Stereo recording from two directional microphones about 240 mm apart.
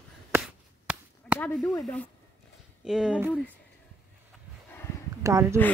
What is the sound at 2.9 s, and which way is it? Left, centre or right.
Speech, centre.